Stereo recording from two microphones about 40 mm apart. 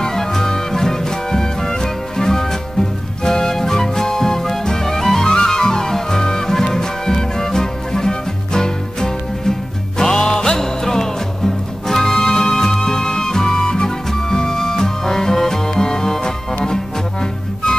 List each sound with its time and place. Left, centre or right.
0.0 s music: centre